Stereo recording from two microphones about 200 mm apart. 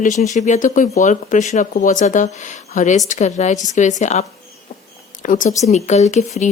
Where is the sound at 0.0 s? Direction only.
35° left (ahead or behind).